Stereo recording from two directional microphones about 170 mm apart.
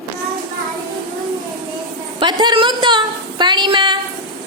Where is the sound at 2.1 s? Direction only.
25° right (ahead or behind).